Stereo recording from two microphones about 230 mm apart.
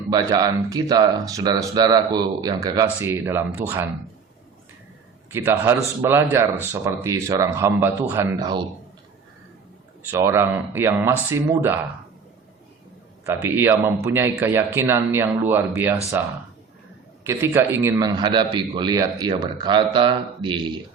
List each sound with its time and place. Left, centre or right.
0.1 s speech: centre
5.3 s speech: centre
10.1 s speech: centre
13.2 s speech: centre
17.2 s a man's voice: centre